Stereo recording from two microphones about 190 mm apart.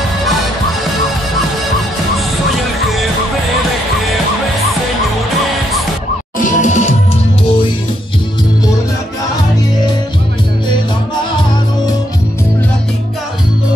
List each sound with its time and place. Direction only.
6.3 s music: 40° left (ahead or behind)